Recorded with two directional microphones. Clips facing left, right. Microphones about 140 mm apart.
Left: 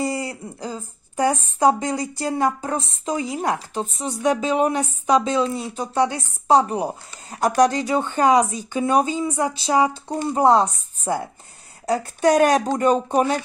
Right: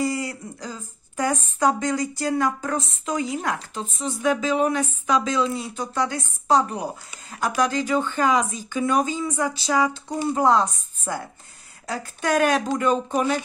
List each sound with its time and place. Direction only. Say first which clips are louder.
0.0 s speech: even; 30° left (ahead or behind)